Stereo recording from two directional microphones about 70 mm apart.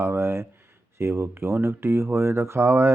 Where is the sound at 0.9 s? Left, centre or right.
Right.